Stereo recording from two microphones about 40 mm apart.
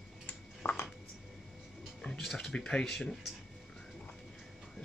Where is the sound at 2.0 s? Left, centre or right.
Centre.